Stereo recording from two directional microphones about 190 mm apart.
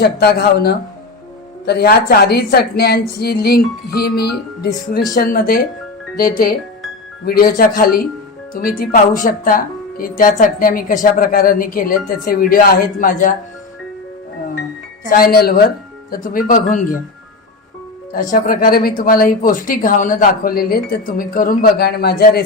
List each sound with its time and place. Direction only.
0.0 s a woman's voice: 60° left (ahead or behind)
15.1 s speech: 50° left (ahead or behind)
18.1 s speech: 45° left (ahead or behind)